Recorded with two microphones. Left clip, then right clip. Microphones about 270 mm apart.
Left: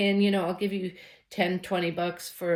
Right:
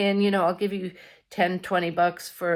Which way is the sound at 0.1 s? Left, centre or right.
Centre.